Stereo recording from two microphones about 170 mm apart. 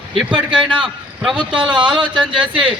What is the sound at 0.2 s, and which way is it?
Speech, 5° right (ahead or behind).